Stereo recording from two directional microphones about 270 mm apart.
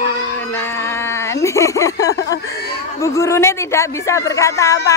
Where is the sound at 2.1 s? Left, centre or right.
Left.